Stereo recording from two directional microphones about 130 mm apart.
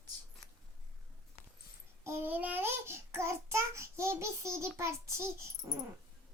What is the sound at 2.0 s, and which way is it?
Child singing, 20° right (ahead or behind).